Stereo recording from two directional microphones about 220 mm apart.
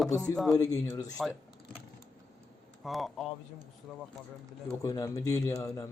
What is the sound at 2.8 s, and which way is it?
Speech, centre (ahead or behind).